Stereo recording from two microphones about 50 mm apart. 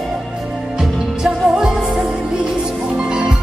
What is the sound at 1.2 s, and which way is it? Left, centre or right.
Music, centre.